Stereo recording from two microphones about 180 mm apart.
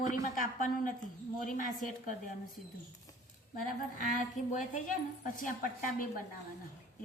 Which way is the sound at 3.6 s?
50° left (ahead or behind).